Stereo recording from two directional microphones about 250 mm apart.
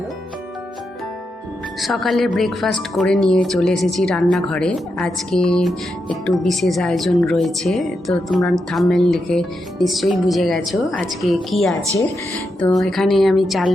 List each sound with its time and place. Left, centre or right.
1.8 s speech: centre